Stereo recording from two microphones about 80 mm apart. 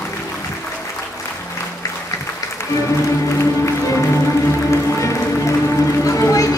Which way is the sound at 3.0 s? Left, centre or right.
Left.